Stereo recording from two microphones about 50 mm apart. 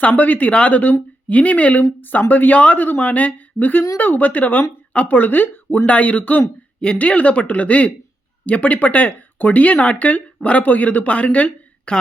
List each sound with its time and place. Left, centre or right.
0.0 s speech: left
6.7 s speech: left